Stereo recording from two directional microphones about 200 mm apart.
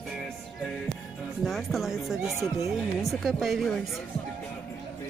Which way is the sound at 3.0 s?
Centre (ahead or behind).